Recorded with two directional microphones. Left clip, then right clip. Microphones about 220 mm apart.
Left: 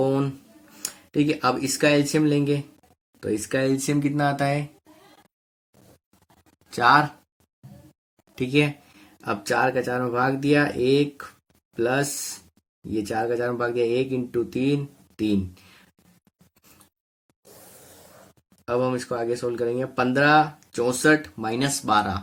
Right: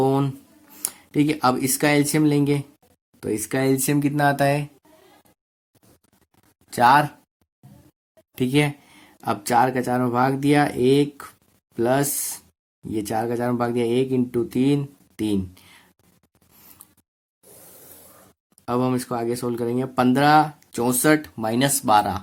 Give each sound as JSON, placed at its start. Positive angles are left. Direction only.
{"t": 0.0, "sound": "speech", "side_deg": -45}
{"t": 6.7, "sound": "speech", "side_deg": -40}
{"t": 8.4, "sound": "speech", "side_deg": -40}
{"t": 18.6, "sound": "speech", "side_deg": -45}